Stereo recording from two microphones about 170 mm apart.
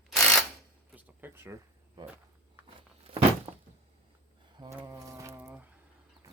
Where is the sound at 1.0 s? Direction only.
10° right (ahead or behind).